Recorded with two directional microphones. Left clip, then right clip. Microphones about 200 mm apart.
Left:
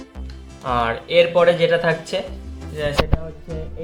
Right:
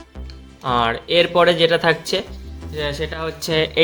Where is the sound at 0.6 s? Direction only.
35° right (ahead or behind).